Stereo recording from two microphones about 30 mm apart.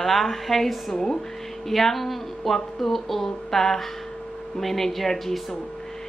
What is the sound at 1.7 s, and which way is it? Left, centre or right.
A woman's voice, centre.